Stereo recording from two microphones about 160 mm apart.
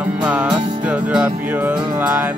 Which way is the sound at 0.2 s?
5° right (ahead or behind).